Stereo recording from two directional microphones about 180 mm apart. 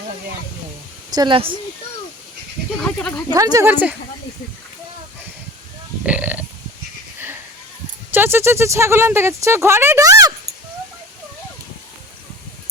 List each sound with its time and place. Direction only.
1.1 s speech: 25° right (ahead or behind)
2.7 s speech: 5° left (ahead or behind)
3.2 s speech: 20° right (ahead or behind)
6.0 s speech: 5° right (ahead or behind)
8.1 s speech: 10° right (ahead or behind)